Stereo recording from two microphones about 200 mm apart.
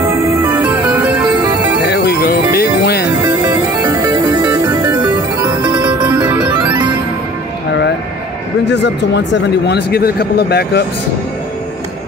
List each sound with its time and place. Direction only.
0.0 s music: 15° right (ahead or behind)
1.9 s music: 55° left (ahead or behind)
3.3 s music: 10° right (ahead or behind)
8.6 s speech: 60° left (ahead or behind)